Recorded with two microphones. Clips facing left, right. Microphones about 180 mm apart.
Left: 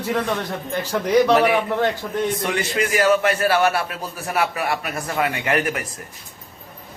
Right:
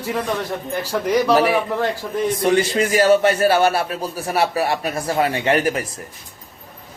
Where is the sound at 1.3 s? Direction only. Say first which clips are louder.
Right 1 dB; 35° right (ahead or behind).